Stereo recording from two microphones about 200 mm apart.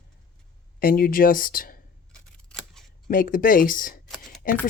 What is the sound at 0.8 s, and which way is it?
Speech, 45° left (ahead or behind).